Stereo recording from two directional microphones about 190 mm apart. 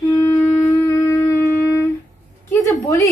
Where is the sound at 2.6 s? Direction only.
15° left (ahead or behind).